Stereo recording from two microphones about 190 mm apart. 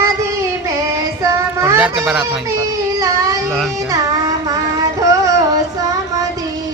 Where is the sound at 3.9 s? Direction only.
20° right (ahead or behind).